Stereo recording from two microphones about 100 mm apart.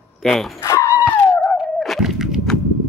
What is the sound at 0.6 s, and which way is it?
Dog, 30° left (ahead or behind).